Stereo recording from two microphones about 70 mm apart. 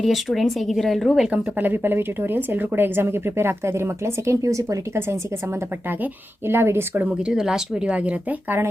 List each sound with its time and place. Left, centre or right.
0.0 s speech: centre
1.3 s a woman's voice: right
6.5 s a woman's voice: right
7.3 s speech: centre; by 8.7 s right